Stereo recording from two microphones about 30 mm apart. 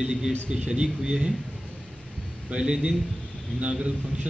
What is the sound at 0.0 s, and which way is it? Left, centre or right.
A man's voice, right.